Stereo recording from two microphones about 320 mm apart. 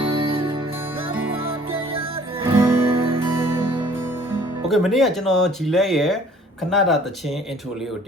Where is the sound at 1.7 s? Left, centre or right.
Centre.